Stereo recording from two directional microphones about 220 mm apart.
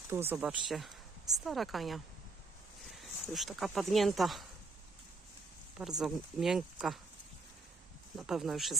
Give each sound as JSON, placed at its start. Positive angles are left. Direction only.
{"t": 0.1, "sound": "speech", "side_deg": -10}
{"t": 6.0, "sound": "speech", "side_deg": 0}
{"t": 8.1, "sound": "speech", "side_deg": 0}